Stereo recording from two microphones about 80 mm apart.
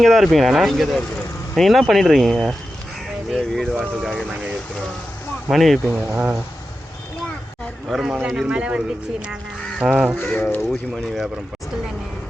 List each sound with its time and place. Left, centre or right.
0.0 s speech: centre
5.5 s speech: centre
5.9 s speech: right
7.9 s speech: centre
8.4 s a man's voice: centre
9.8 s a man's voice: centre
10.3 s speech: centre
10.6 s speech: centre